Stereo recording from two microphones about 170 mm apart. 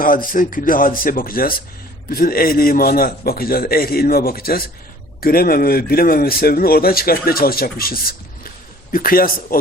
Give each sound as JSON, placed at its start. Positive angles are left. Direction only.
{"t": 0.0, "sound": "speech", "side_deg": 55}